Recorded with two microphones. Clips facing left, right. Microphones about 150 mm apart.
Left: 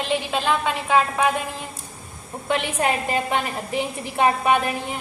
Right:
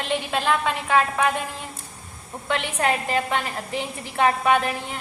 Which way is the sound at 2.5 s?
15° left (ahead or behind).